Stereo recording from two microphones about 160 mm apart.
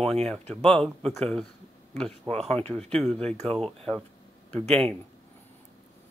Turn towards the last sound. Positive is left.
turn(degrees=5)  # may be behind; listen again after turning